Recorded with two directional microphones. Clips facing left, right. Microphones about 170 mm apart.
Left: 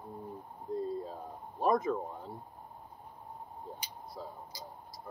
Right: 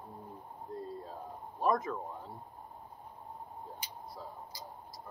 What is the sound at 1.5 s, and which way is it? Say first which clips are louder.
Speech: left 2 dB; 20° left (ahead or behind).